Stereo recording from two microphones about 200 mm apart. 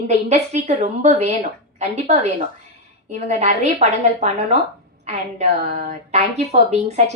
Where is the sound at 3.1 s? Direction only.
35° right (ahead or behind).